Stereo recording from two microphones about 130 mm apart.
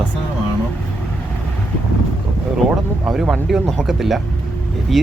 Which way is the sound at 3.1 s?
Centre (ahead or behind).